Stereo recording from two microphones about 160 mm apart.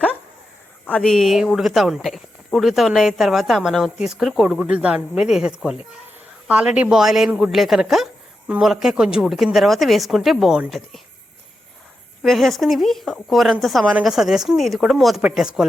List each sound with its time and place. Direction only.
0.9 s speech: 5° left (ahead or behind)
12.2 s speech: centre (ahead or behind)